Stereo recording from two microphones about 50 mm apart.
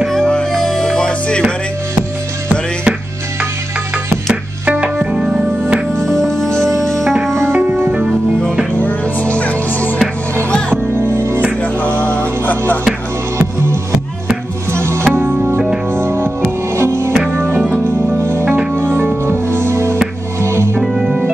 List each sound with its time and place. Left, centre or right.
0.1 s music: centre
4.3 s music: right
5.9 s music: centre
7.5 s music: right
8.7 s music: left
11.0 s music: right
12.0 s music: left
14.7 s music: right
17.3 s music: right
20.8 s music: centre